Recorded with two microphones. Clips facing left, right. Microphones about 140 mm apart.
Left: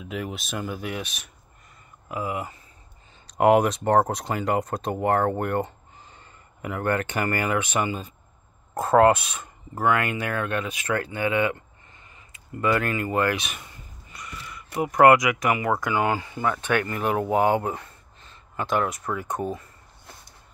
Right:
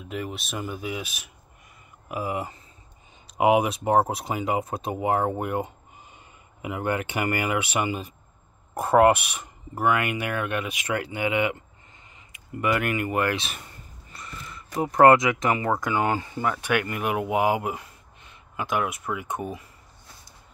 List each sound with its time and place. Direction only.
0.1 s speech: centre (ahead or behind)
2.0 s speech: 25° right (ahead or behind)
3.3 s speech: 5° right (ahead or behind); by 13.5 s 20° right (ahead or behind)
14.1 s gasp: 30° right (ahead or behind)
14.8 s speech: 30° right (ahead or behind); by 19.4 s 5° right (ahead or behind)